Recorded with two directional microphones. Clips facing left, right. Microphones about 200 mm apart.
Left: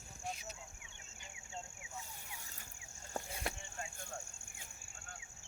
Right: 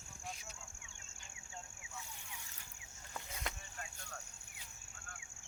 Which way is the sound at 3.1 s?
30° left (ahead or behind).